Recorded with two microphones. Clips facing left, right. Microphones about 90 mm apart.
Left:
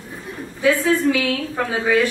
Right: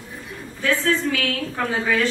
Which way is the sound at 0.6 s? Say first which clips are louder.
Left 4 dB; 10° left (ahead or behind).